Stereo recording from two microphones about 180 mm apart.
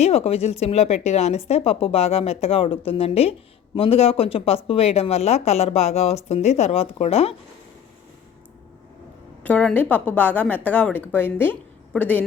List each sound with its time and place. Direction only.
0.0 s speech: 35° left (ahead or behind)
9.4 s a woman's voice: 10° left (ahead or behind)